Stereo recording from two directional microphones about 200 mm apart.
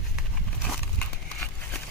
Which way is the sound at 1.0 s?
10° left (ahead or behind).